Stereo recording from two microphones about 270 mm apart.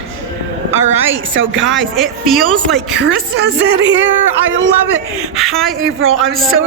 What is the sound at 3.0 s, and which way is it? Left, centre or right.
Speech, right.